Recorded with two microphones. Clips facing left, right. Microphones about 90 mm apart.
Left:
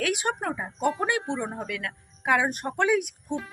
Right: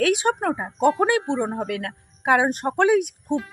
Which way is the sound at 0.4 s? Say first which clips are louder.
Right 6 dB; 45° right (ahead or behind).